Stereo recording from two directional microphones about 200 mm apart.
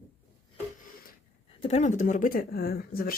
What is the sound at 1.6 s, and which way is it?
Speech, 35° left (ahead or behind).